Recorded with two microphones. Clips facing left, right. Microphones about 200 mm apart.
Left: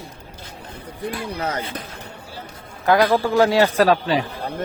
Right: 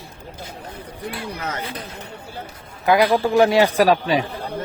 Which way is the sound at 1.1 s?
35° left (ahead or behind).